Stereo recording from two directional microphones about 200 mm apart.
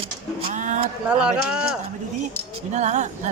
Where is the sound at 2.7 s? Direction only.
35° right (ahead or behind).